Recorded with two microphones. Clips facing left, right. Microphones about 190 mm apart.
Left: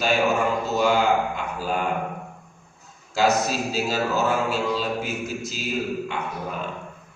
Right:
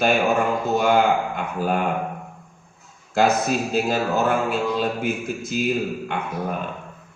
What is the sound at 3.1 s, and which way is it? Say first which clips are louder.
A man's voice: right 2 dB; 55° right (ahead or behind).